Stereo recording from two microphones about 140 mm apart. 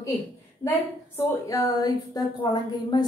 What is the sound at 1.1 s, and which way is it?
Speech, 15° left (ahead or behind).